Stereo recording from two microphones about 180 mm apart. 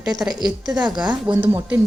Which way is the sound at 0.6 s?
25° right (ahead or behind).